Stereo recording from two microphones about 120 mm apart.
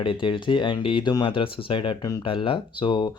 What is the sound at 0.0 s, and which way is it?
Speech, 45° left (ahead or behind).